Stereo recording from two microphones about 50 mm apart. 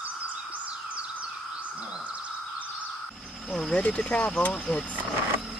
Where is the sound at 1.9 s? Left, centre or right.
Right.